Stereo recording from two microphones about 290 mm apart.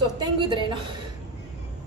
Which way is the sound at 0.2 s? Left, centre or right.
Centre.